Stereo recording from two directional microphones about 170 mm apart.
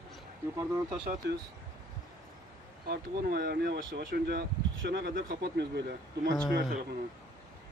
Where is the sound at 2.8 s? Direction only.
60° right (ahead or behind); by 5.9 s 80° right.